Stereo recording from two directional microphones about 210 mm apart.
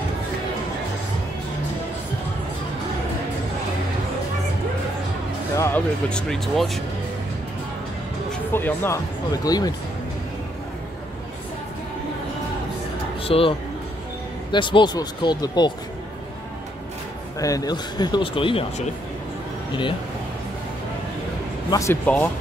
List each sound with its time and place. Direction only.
5.6 s speech: 5° left (ahead or behind)
8.3 s speech: 10° left (ahead or behind)
13.2 s speech: 25° left (ahead or behind)
17.4 s speech: 15° left (ahead or behind)
21.6 s speech: 15° left (ahead or behind)